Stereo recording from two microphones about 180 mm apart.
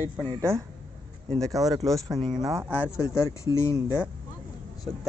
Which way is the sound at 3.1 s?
15° left (ahead or behind).